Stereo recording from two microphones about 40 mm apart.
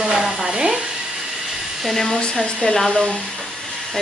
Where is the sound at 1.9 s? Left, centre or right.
Centre.